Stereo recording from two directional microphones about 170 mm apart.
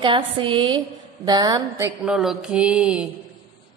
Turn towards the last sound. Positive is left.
turn(degrees=-5)  # may be behind; listen again after turning